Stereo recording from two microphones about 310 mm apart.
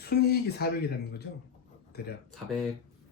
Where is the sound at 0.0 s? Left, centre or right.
Left.